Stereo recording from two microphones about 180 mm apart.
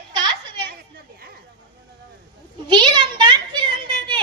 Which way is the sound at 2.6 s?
25° right (ahead or behind).